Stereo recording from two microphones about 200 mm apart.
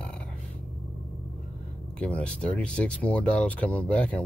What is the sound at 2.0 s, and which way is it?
Speech, 5° left (ahead or behind).